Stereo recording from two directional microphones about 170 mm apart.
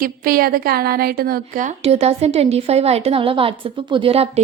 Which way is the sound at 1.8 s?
35° right (ahead or behind).